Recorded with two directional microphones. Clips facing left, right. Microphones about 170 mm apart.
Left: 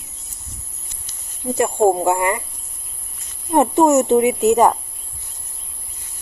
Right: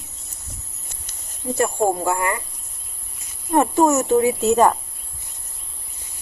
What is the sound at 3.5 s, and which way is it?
Speech, 20° left (ahead or behind).